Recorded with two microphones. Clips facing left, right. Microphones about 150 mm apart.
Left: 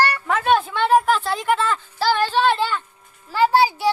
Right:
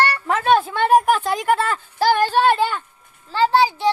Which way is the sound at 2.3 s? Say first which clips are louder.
Right 1 dB; 10° right (ahead or behind).